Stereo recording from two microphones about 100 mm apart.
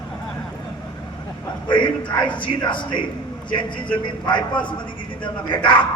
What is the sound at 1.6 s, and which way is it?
A man's voice, 55° left (ahead or behind).